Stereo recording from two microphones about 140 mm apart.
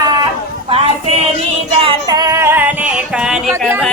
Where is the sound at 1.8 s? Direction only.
35° right (ahead or behind); by 3.5 s 5° right (ahead or behind).